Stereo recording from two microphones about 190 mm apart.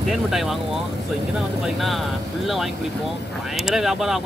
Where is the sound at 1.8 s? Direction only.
Centre (ahead or behind).